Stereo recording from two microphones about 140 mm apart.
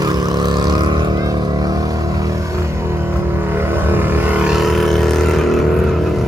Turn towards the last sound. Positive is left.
turn(degrees=0)  # may be behind; listen again after turning